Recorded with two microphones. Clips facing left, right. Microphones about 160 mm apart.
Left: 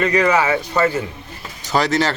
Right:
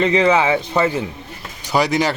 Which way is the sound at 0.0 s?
25° right (ahead or behind).